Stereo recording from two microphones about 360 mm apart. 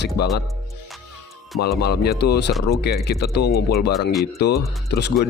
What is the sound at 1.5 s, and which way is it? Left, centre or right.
Speech, left.